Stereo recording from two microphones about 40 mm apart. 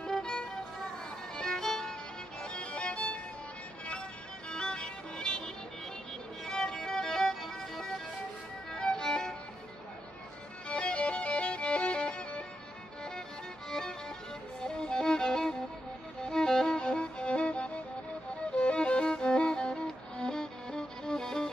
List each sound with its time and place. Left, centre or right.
0.0 s music: centre
1.3 s violin: centre
2.4 s music: left
4.5 s music: left
6.4 s music: centre
10.7 s music: left
13.7 s music: centre